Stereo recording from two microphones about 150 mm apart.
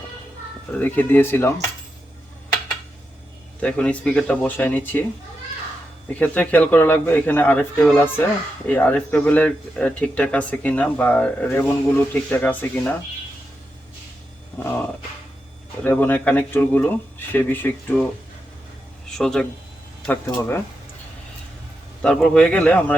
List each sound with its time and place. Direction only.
0.8 s speech: 10° left (ahead or behind)
3.6 s speech: 10° left (ahead or behind)
6.1 s speech: 10° left (ahead or behind)
14.6 s speech: 15° left (ahead or behind)
19.1 s speech: 5° left (ahead or behind)
20.2 s speech: 15° left (ahead or behind)
22.0 s speech: 5° left (ahead or behind)